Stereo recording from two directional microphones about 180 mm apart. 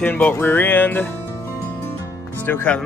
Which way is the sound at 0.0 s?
10° left (ahead or behind).